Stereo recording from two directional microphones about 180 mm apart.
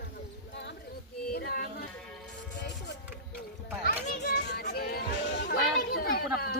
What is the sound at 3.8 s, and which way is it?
Children playing, 65° left (ahead or behind).